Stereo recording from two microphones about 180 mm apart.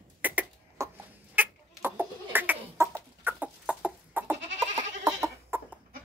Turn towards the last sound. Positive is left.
turn(degrees=-15)  # may be behind; listen again after turning